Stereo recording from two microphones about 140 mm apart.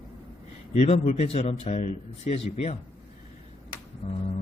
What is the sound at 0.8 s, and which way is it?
Speech, 50° left (ahead or behind).